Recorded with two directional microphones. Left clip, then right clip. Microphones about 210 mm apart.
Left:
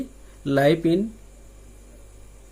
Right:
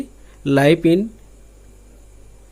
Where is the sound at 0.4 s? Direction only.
35° right (ahead or behind).